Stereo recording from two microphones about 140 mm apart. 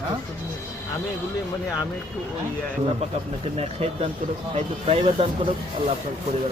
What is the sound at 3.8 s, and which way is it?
Speech, 45° right (ahead or behind).